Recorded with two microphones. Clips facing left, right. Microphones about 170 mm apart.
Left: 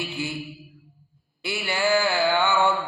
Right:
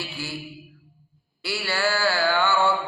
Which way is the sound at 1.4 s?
20° left (ahead or behind).